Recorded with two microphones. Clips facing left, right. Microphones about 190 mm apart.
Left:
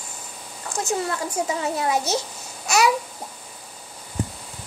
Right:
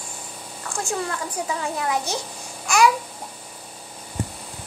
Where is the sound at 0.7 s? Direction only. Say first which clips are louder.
Left 2 dB; 20° left (ahead or behind).